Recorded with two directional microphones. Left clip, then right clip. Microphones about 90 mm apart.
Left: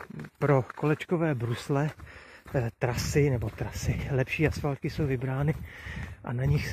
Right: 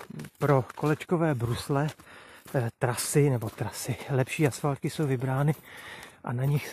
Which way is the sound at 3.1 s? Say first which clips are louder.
Right 1 dB; 45° right (ahead or behind).